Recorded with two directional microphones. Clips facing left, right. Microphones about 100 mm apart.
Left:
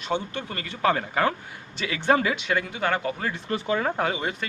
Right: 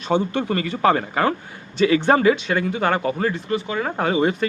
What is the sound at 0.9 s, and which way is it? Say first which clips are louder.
Speech: right 4 dB; 15° right (ahead or behind).